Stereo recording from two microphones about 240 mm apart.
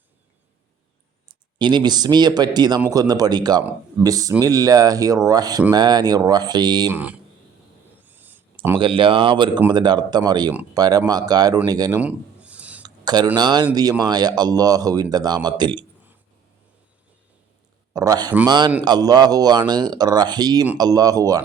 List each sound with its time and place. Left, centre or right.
1.5 s speech: centre
8.0 s a sound: centre
8.5 s speech: centre
12.8 s speech: centre
17.9 s speech: centre